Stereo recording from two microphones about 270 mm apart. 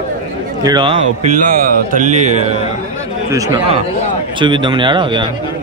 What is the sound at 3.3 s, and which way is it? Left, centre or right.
Speech, centre.